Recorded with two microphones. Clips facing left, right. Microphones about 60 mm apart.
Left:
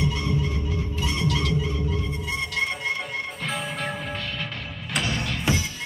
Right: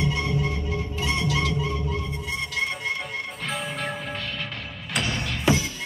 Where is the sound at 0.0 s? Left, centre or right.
Right.